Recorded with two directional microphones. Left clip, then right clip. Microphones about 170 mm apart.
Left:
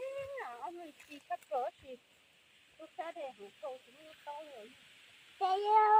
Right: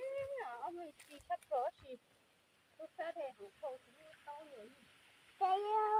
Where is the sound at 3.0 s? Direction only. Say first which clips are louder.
Left 1 dB; 45° left (ahead or behind).